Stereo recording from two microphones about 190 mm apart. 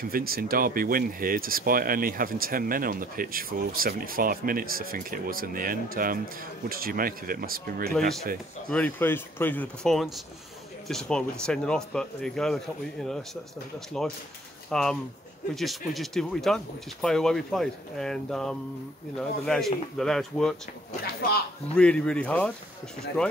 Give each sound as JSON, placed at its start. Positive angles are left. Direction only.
{"t": 0.1, "sound": "speech", "side_deg": -50}
{"t": 8.6, "sound": "speech", "side_deg": 10}
{"t": 14.7, "sound": "speech", "side_deg": 5}
{"t": 21.0, "sound": "speech", "side_deg": 55}
{"t": 21.7, "sound": "speech", "side_deg": 5}